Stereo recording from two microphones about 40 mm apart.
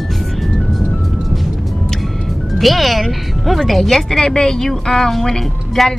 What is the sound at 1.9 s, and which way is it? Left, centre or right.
Speech, centre.